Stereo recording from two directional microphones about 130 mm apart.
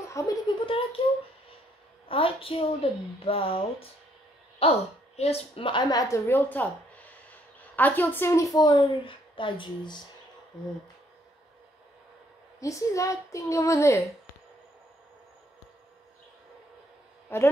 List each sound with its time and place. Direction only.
0.1 s speech: 25° left (ahead or behind)
0.6 s a sound: 45° left (ahead or behind)
2.0 s a woman's voice: 45° left (ahead or behind)
12.5 s a woman's voice: 25° left (ahead or behind)
17.3 s a man's voice: 20° left (ahead or behind)